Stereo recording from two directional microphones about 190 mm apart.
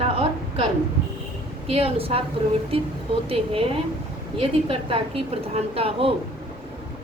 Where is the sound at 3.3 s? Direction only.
30° right (ahead or behind).